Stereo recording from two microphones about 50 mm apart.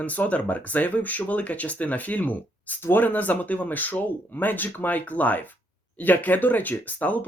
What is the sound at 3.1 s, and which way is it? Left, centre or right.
Speech, left.